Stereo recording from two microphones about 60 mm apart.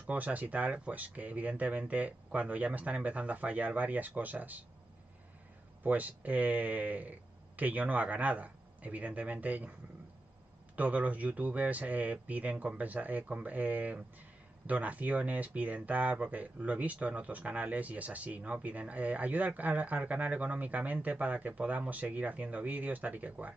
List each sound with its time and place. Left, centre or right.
0.0 s speech: right
5.9 s speech: right
10.8 s speech: right